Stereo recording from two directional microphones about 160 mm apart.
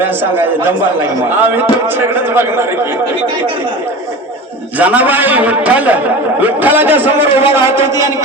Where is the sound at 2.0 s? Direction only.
15° right (ahead or behind).